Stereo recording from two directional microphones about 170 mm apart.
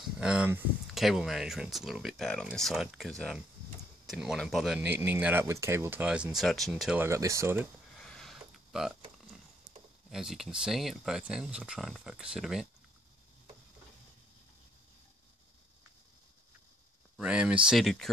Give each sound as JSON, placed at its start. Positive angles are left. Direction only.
{"t": 0.2, "sound": "speech", "side_deg": -5}
{"t": 7.1, "sound": "speech", "side_deg": -20}
{"t": 8.0, "sound": "a sound", "side_deg": 5}
{"t": 10.0, "sound": "speech", "side_deg": 0}
{"t": 17.2, "sound": "speech", "side_deg": -5}